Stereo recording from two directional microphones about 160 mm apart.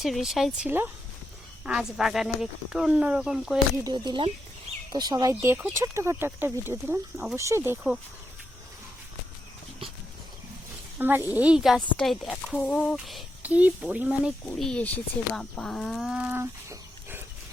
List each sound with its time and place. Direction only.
0.0 s speech: centre (ahead or behind)
3.8 s speech: 25° right (ahead or behind)
10.9 s speech: 15° right (ahead or behind)
14.6 s speech: 5° left (ahead or behind); by 17.2 s 15° right (ahead or behind)